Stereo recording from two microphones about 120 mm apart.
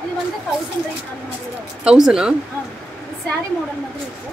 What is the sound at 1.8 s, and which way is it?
Speech, 5° right (ahead or behind).